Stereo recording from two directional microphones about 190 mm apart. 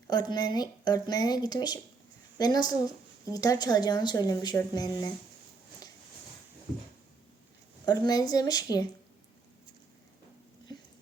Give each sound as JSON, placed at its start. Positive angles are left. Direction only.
{"t": 0.1, "sound": "a woman's voice", "side_deg": 20}
{"t": 7.9, "sound": "a woman's voice", "side_deg": 20}